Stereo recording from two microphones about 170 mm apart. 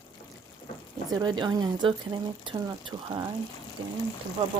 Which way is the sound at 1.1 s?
25° right (ahead or behind).